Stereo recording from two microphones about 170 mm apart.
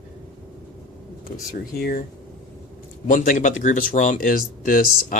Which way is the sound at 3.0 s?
45° left (ahead or behind).